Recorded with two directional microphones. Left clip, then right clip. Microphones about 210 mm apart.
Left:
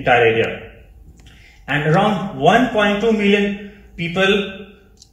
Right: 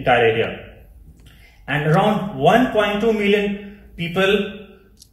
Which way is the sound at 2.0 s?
25° right (ahead or behind).